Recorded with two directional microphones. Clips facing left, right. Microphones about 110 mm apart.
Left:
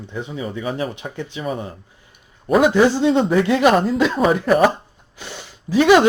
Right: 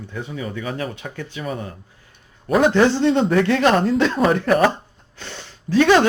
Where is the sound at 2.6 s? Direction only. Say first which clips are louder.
Even; 10° left (ahead or behind).